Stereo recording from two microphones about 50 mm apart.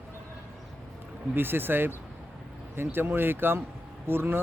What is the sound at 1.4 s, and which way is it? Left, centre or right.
Speech, right.